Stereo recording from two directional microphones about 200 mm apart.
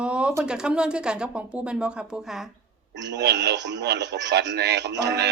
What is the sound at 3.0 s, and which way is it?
A man's voice, 60° right (ahead or behind).